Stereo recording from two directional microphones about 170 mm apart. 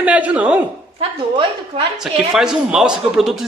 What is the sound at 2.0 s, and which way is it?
A man's voice, 5° right (ahead or behind).